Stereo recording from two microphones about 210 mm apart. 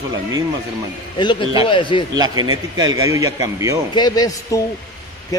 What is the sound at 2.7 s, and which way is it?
Speech, 15° right (ahead or behind).